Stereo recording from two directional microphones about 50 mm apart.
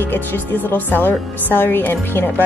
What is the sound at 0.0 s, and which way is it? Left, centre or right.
A woman's voice, left.